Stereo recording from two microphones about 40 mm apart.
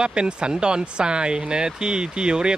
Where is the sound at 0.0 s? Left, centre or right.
Right.